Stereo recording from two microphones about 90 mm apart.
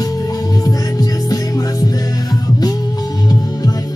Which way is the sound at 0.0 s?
40° left (ahead or behind).